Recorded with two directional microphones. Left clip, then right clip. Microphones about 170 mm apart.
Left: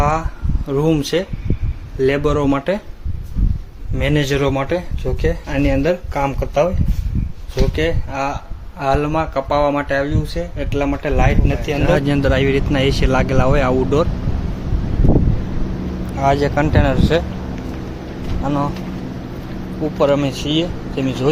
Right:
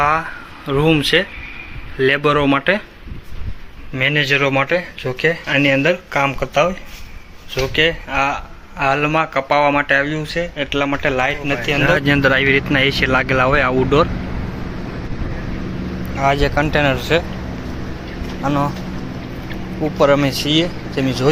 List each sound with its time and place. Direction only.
0.0 s speech: 5° left (ahead or behind)
3.9 s speech: 15° left (ahead or behind)
16.2 s speech: 15° left (ahead or behind)
18.4 s speech: centre (ahead or behind)
19.8 s speech: centre (ahead or behind)